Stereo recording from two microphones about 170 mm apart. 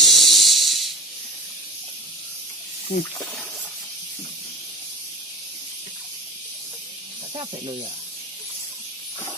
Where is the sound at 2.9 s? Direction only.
65° left (ahead or behind).